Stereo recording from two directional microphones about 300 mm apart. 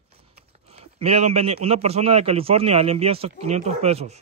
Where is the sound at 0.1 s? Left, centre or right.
Centre.